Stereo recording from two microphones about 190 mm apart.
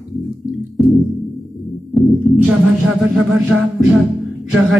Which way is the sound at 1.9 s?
Centre (ahead or behind).